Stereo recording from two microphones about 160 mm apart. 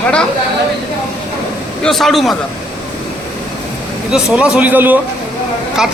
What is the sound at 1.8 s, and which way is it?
Speech, centre (ahead or behind).